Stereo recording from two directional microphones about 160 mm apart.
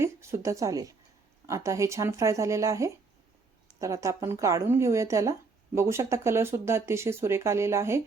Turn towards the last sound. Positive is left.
turn(degrees=-15)  # may be behind; listen again after turning